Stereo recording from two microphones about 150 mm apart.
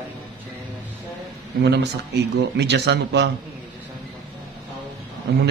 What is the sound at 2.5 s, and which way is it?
Speech, 90° right.